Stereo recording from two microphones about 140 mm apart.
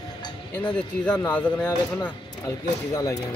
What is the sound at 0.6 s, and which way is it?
Speech, 5° left (ahead or behind).